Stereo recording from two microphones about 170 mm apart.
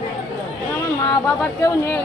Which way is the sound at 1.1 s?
15° left (ahead or behind).